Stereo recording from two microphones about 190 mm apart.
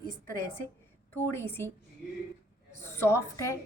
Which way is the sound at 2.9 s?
15° left (ahead or behind).